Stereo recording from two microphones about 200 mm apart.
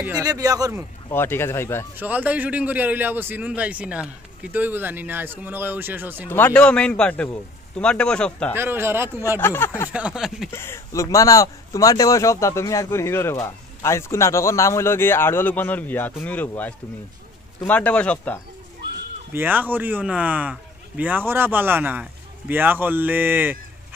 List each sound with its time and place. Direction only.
0.2 s a man's voice: 15° right (ahead or behind)
1.1 s speech: 10° left (ahead or behind)
2.0 s a man's voice: 10° right (ahead or behind)
6.2 s speech: 10° left (ahead or behind)
8.5 s a man's voice: 10° right (ahead or behind)
9.4 s speech: 10° left (ahead or behind)
9.9 s speech: 5° right (ahead or behind)
10.5 s speech: 10° left (ahead or behind)
19.3 s a man's voice: 10° right (ahead or behind)